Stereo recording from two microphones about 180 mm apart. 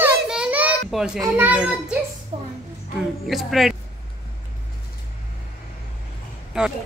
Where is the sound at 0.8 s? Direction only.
5° right (ahead or behind).